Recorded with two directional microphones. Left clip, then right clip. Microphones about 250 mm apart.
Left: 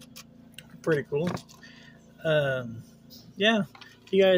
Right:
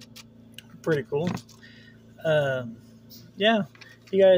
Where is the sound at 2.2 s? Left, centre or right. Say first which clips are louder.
Right 2 dB; centre.